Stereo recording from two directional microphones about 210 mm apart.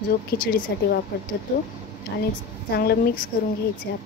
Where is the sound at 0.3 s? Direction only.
50° left (ahead or behind).